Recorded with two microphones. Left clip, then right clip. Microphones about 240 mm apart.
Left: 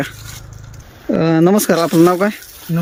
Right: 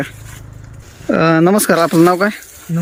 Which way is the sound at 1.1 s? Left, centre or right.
Centre.